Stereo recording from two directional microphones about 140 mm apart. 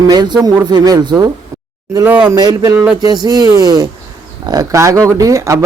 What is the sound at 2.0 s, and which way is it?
Speech, 10° right (ahead or behind).